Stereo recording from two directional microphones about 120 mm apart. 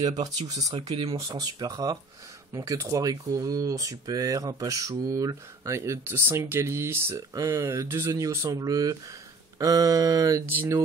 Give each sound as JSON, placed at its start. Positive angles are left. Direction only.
{"t": 0.0, "sound": "speech", "side_deg": -35}
{"t": 0.7, "sound": "speech", "side_deg": -55}
{"t": 1.3, "sound": "speech", "side_deg": -35}